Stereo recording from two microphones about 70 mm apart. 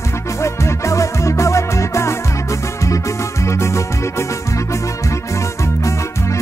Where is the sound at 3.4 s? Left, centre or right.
Left.